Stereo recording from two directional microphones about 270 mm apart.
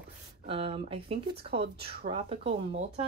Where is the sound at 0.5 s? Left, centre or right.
Centre.